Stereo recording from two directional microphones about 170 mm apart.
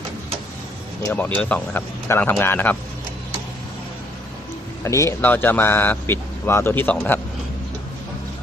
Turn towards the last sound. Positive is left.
turn(degrees=10)  # may be behind; listen again after turning